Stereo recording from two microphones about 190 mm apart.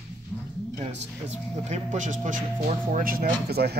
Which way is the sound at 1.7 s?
40° right (ahead or behind).